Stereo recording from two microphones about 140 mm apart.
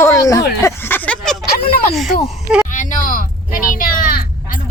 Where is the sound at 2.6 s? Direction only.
65° left (ahead or behind).